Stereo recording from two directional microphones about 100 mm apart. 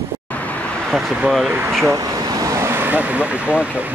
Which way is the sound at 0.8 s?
Centre (ahead or behind).